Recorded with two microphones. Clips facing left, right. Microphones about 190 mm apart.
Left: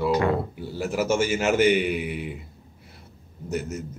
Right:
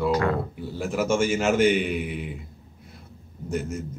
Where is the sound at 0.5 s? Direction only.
5° left (ahead or behind).